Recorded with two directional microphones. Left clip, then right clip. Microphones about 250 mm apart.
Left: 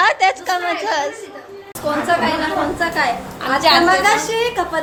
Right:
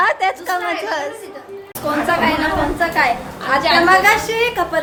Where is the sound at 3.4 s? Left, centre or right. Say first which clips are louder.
Left 1 dB; left.